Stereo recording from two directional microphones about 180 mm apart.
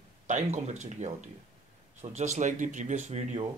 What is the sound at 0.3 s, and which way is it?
Speech, 40° right (ahead or behind).